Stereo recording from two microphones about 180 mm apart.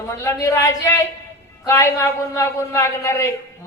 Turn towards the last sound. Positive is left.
turn(degrees=15)  # may be behind; listen again after turning